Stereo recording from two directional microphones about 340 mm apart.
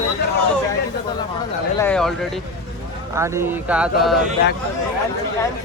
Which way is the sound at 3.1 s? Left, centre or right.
Centre.